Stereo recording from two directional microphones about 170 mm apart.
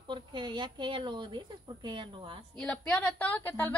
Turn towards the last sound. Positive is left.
turn(degrees=10)  # may be behind; listen again after turning